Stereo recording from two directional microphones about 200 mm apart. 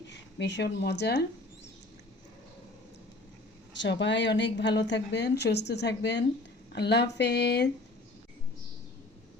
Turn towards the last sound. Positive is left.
turn(degrees=55)  # may be behind; listen again after turning